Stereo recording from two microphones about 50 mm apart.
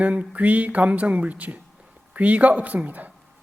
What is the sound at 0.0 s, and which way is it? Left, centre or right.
Speech, right.